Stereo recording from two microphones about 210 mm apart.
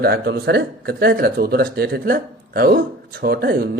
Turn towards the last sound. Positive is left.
turn(degrees=-45)  # may be behind; listen again after turning